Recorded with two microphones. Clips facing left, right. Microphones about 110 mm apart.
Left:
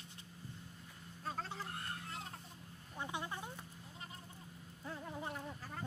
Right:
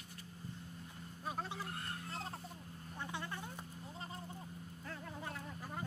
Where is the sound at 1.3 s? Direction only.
15° right (ahead or behind).